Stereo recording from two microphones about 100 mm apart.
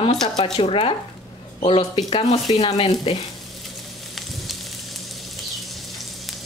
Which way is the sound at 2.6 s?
80° left.